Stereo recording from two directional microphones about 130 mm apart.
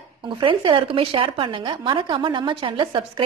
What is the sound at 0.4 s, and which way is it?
Speech, 40° right (ahead or behind).